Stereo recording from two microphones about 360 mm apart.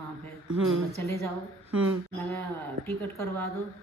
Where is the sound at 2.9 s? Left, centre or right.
Centre.